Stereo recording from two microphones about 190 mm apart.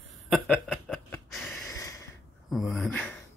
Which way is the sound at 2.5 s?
Centre (ahead or behind).